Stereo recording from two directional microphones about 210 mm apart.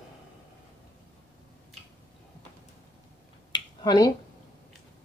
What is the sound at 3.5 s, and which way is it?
Finger snapping, 20° left (ahead or behind).